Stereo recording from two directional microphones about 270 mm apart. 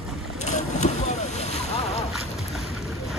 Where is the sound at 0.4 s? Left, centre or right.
Left.